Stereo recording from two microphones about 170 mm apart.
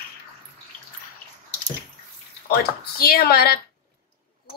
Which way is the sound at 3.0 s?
65° left (ahead or behind).